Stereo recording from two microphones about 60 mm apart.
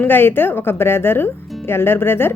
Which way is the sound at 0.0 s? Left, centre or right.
Left.